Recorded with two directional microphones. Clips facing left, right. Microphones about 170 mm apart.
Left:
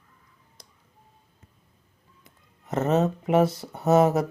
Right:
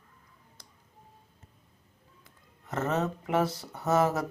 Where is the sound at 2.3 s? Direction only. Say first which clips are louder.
Left 6 dB; 20° left (ahead or behind).